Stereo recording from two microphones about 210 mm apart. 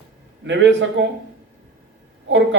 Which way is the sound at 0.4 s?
60° right (ahead or behind).